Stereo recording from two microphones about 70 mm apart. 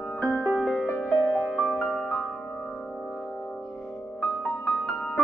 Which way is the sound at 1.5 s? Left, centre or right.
Centre.